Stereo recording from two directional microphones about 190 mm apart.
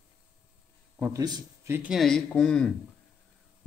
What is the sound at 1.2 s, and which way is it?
Speech, 20° right (ahead or behind).